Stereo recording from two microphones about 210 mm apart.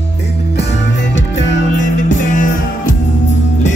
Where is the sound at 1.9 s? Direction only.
40° left (ahead or behind).